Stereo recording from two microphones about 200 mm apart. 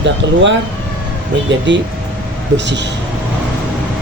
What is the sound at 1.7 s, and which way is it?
Speech, 65° right (ahead or behind).